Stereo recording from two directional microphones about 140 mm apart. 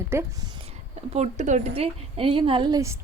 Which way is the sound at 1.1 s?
55° right (ahead or behind).